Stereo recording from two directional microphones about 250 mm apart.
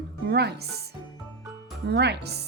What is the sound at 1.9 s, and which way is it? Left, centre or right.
Music, right.